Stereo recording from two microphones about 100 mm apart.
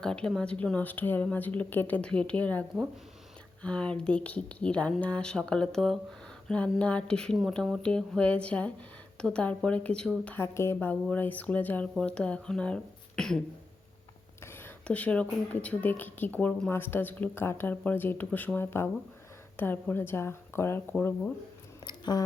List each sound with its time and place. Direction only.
0.0 s speech: 5° left (ahead or behind)
10.2 s speech: 25° left (ahead or behind); by 13.4 s 5° left (ahead or behind)
14.4 s a sound: 20° left (ahead or behind)
14.8 s speech: 15° left (ahead or behind)
21.8 s speech: 45° left (ahead or behind)